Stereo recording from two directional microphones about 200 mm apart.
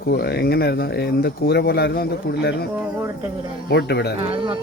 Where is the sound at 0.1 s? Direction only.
55° left (ahead or behind).